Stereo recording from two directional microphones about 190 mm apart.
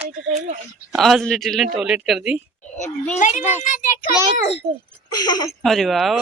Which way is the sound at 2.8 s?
40° left (ahead or behind).